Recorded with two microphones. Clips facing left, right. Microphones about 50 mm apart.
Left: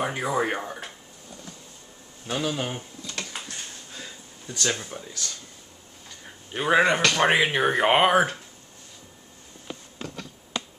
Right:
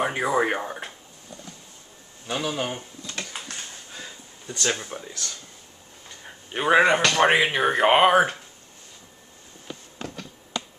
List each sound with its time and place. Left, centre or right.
0.0 s speech: centre
2.3 s speech: centre
3.9 s a sound: centre
6.0 s speech: centre